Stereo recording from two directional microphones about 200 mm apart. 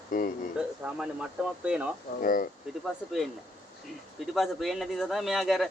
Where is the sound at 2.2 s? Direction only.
45° left (ahead or behind).